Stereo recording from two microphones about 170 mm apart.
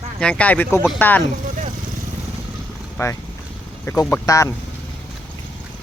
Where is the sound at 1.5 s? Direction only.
50° right (ahead or behind).